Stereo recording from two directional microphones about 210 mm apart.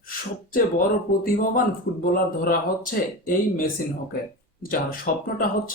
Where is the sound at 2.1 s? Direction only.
45° left (ahead or behind).